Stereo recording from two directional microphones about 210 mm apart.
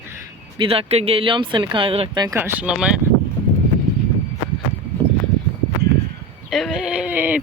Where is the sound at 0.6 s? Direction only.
25° right (ahead or behind); by 2.9 s 5° right (ahead or behind).